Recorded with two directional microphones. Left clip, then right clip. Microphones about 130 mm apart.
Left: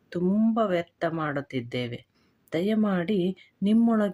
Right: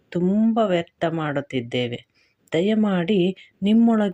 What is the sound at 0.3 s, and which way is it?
Speech, 10° right (ahead or behind).